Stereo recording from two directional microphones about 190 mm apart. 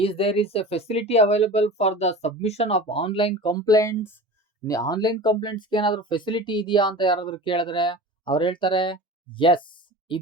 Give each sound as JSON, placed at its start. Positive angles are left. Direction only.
{"t": 0.0, "sound": "speech", "side_deg": 30}